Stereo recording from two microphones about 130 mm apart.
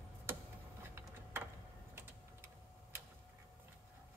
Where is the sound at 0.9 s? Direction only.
15° right (ahead or behind).